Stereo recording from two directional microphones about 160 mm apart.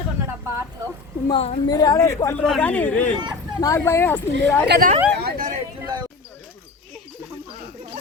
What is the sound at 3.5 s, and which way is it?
Speech, 20° left (ahead or behind).